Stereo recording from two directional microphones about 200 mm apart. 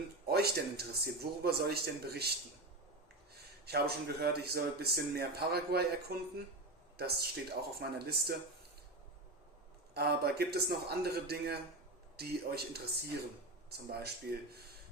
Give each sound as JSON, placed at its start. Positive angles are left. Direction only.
{"t": 0.3, "sound": "speech", "side_deg": -50}
{"t": 3.7, "sound": "speech", "side_deg": -50}
{"t": 9.9, "sound": "speech", "side_deg": -50}